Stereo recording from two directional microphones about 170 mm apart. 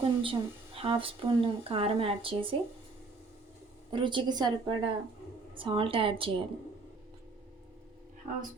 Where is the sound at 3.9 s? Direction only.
30° right (ahead or behind).